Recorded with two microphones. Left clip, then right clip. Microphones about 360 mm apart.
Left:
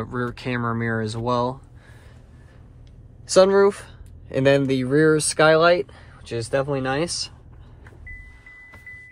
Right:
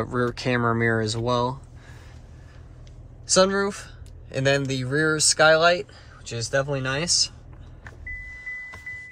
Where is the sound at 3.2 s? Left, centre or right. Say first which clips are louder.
Left 5 dB; centre.